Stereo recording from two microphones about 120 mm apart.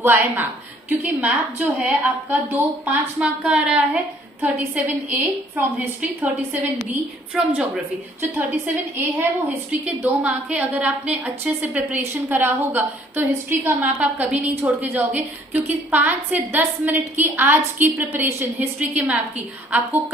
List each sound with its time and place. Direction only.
0.0 s a woman's voice: 15° right (ahead or behind)
10.2 s a woman's voice: 10° right (ahead or behind)